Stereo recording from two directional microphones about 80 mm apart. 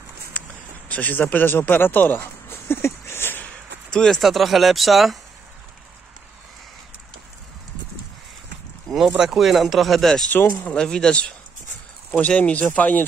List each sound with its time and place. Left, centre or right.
0.8 s speech: centre
3.4 s speech: centre
8.8 s a sound: centre
9.1 s speech: centre; by 13.0 s left